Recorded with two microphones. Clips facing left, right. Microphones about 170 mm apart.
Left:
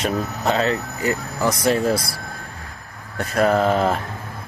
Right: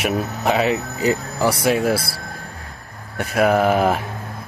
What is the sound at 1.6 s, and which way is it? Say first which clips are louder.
Speech: even; 5° right (ahead or behind).